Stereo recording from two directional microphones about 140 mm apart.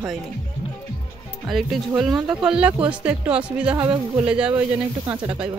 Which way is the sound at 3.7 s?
35° right (ahead or behind).